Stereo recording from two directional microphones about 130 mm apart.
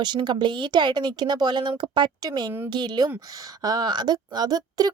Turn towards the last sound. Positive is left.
turn(degrees=-30)  # may be behind; listen again after turning